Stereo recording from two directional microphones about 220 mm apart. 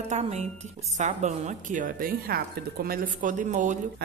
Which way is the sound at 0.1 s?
30° right (ahead or behind).